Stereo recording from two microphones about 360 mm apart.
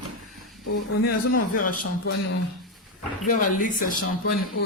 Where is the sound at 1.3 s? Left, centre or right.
Left.